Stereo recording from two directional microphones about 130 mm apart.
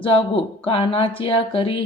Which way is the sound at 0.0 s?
45° left (ahead or behind).